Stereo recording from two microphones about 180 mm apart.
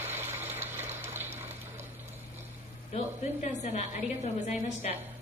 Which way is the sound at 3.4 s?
40° left (ahead or behind).